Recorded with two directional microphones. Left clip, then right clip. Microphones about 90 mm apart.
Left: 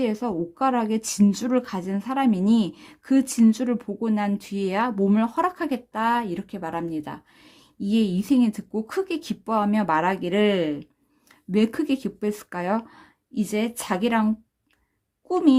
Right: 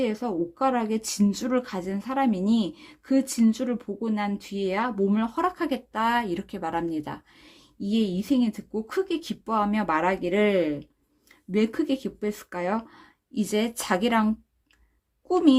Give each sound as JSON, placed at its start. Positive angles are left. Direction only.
{"t": 0.0, "sound": "a woman's voice", "side_deg": 25}
{"t": 7.8, "sound": "a woman's voice", "side_deg": 30}
{"t": 11.5, "sound": "speech", "side_deg": 35}
{"t": 13.3, "sound": "speech", "side_deg": 0}